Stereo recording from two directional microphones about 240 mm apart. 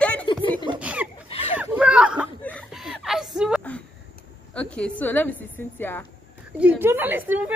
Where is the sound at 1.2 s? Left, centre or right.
Left.